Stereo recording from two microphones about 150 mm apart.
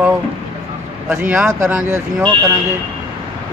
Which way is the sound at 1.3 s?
10° right (ahead or behind).